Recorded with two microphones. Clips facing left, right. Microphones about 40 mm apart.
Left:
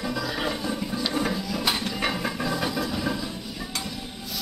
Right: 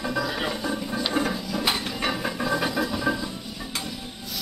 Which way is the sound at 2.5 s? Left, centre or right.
Centre.